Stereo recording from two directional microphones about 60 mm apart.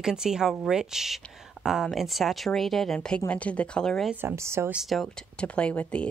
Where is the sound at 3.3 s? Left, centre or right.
Left.